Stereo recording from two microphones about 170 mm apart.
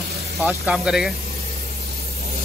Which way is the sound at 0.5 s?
5° right (ahead or behind).